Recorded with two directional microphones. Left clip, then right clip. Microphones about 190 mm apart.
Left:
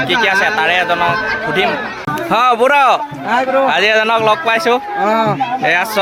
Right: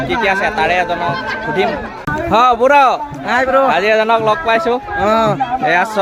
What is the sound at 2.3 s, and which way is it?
A man's voice, centre (ahead or behind).